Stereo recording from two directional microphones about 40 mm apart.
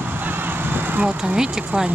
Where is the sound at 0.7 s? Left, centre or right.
Right.